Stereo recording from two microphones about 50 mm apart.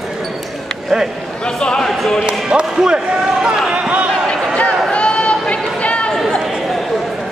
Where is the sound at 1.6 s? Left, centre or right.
Centre.